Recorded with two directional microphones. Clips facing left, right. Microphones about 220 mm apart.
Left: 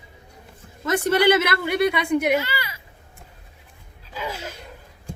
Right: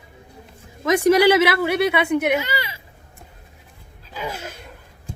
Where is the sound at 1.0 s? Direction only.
10° right (ahead or behind).